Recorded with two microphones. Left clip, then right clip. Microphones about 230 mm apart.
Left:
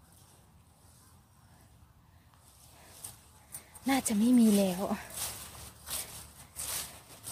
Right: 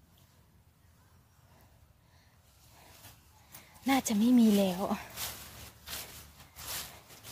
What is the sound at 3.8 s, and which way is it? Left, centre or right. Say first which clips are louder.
Speech: right 1 dB; centre.